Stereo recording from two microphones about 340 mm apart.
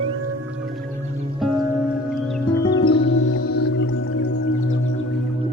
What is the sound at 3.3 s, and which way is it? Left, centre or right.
Music, left.